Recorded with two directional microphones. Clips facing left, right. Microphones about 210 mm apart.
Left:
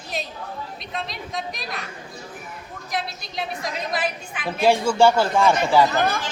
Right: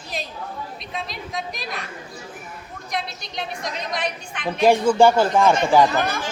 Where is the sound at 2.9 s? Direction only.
Centre (ahead or behind).